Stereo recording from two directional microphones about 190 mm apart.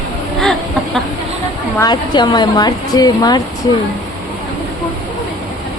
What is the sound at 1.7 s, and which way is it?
A woman's voice, 20° left (ahead or behind).